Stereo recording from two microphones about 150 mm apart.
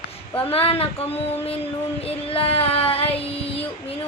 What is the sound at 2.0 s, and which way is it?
Child singing, 40° left (ahead or behind).